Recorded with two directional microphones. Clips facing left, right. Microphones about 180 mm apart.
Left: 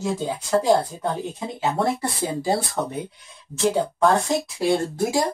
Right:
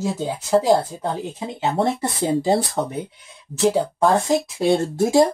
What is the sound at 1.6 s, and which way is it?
Speech, 20° right (ahead or behind).